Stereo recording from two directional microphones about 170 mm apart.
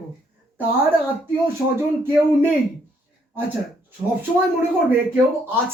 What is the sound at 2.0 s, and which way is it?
Speech, 10° right (ahead or behind).